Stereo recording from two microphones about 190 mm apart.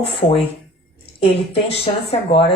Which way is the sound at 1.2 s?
30° left (ahead or behind).